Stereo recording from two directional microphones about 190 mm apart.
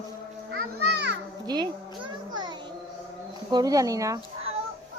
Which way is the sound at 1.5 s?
20° right (ahead or behind).